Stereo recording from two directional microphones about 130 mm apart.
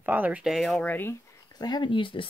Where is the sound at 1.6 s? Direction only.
35° left (ahead or behind).